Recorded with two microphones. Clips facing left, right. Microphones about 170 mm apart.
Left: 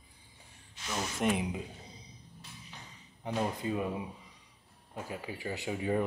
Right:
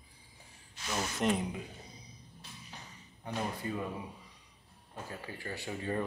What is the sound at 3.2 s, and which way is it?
Speech, 20° left (ahead or behind).